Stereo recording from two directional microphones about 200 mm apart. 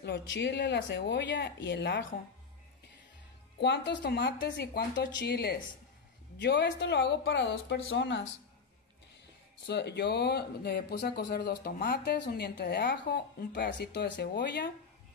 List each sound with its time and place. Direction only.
0.0 s speech: 60° left (ahead or behind)
3.5 s speech: 60° left (ahead or behind)
9.7 s speech: 55° left (ahead or behind)